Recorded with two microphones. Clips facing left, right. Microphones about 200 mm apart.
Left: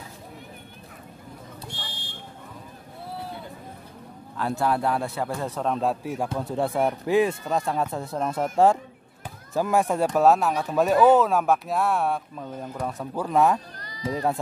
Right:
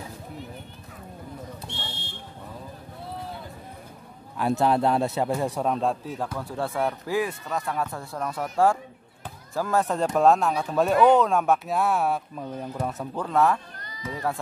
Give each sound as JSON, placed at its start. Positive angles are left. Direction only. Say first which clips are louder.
{"t": 1.7, "sound": "fire alarm", "louder": "right 2 dB", "side_deg": -25}
{"t": 4.4, "sound": "speech", "louder": "right 3 dB", "side_deg": -20}
{"t": 5.8, "sound": "speech", "louder": "left 1 dB", "side_deg": 10}
{"t": 6.2, "sound": "speech", "louder": "left 4 dB", "side_deg": 20}
{"t": 13.7, "sound": "bleat", "louder": "left 6 dB", "side_deg": 35}